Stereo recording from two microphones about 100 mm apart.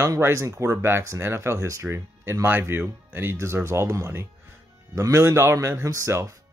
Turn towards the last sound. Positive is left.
turn(degrees=-30)  # may be behind; listen again after turning